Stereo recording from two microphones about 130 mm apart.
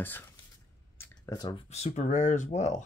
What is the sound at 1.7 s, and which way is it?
Speech, 60° left (ahead or behind).